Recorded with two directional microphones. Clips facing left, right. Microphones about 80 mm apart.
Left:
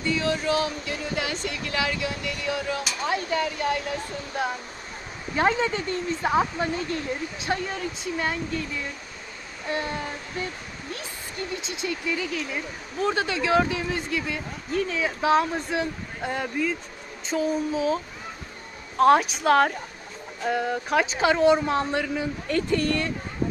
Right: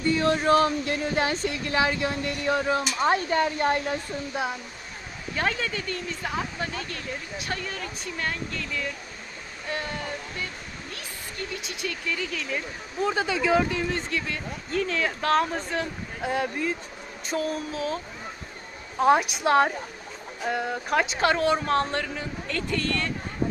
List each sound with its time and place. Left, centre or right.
0.0 s speech: right
5.3 s speech: left
11.6 s speech: left
13.0 s speech: centre